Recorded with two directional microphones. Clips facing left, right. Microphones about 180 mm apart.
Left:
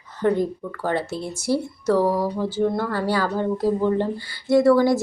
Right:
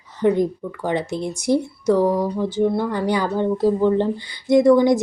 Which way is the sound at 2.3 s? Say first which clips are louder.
Right 2 dB; 15° right (ahead or behind).